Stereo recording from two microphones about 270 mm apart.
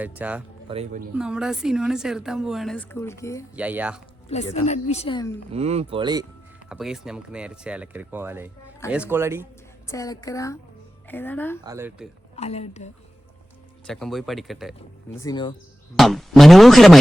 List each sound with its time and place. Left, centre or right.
0.0 s a woman's voice: centre
0.7 s speech: right
1.1 s a woman's voice: centre
3.5 s a woman's voice: centre
4.5 s a woman's voice: left
5.5 s speech: right
6.7 s a woman's voice: centre
9.8 s a woman's voice: centre
11.6 s speech: centre
12.4 s a woman's voice: left
13.8 s a woman's voice: centre
15.2 s a woman's voice: centre
16.0 s a woman's voice: centre